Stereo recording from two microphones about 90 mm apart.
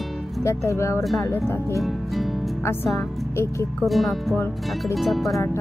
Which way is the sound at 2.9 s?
30° left (ahead or behind).